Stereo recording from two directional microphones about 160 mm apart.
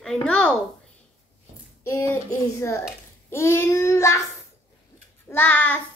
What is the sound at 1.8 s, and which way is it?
A woman's voice, 15° left (ahead or behind).